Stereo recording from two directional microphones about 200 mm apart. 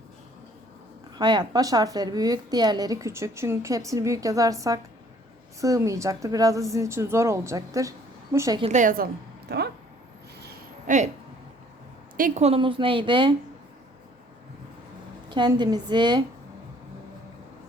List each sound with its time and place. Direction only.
1.2 s a woman's voice: 20° right (ahead or behind)
8.6 s a woman's voice: 40° right (ahead or behind)
9.5 s speech: 55° right (ahead or behind)
10.4 s a sound: 40° right (ahead or behind)
12.1 s a woman's voice: 40° right (ahead or behind); by 13.3 s 25° right (ahead or behind)
15.3 s a woman's voice: 20° right (ahead or behind)